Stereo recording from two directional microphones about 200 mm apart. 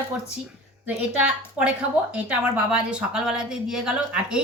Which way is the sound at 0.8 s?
5° right (ahead or behind).